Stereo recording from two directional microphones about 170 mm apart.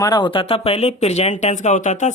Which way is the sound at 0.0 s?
25° left (ahead or behind).